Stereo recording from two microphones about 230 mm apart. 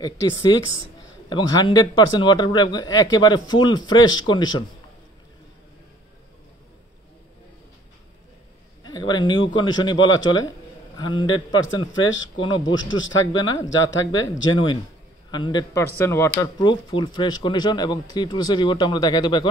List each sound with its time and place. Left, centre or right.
0.0 s speech: centre
8.8 s a sound: centre
9.8 s speech: centre
11.9 s a man's voice: left
12.4 s speech: left
12.6 s a man's voice: left
13.3 s speech: centre
13.7 s a man's voice: left
14.5 s speech: centre